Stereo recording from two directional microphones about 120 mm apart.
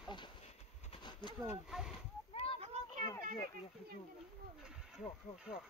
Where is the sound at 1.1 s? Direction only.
40° left (ahead or behind).